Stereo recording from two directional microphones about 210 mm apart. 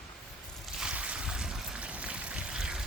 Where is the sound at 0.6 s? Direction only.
5° right (ahead or behind).